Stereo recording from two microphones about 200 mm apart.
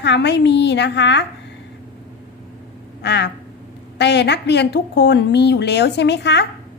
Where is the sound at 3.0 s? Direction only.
60° left (ahead or behind).